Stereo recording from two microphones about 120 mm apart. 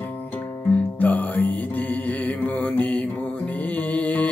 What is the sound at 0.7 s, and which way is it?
Music, 15° left (ahead or behind).